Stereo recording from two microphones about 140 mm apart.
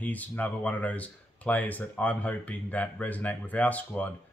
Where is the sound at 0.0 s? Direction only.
10° left (ahead or behind).